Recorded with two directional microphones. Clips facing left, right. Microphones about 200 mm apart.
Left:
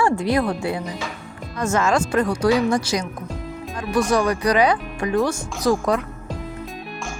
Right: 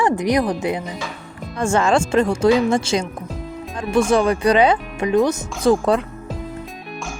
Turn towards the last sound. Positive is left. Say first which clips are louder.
# right 3 dB
turn(degrees=-30)  # may be behind; listen again after turning